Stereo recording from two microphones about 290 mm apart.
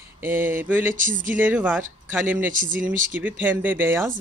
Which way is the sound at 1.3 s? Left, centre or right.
Centre.